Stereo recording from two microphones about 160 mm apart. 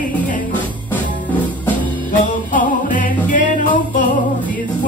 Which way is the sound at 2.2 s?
55° left (ahead or behind).